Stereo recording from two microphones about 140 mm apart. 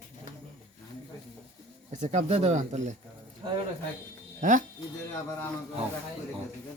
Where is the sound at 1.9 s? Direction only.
60° right (ahead or behind).